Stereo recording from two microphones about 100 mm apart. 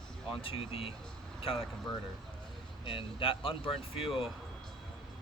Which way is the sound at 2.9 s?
60° left (ahead or behind).